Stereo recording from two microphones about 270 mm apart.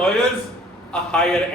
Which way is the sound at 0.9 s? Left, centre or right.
Centre.